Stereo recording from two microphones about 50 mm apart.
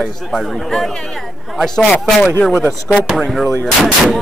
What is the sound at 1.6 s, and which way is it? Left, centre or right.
Speech, centre.